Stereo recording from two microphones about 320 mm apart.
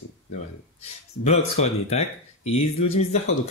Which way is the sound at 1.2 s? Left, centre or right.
Centre.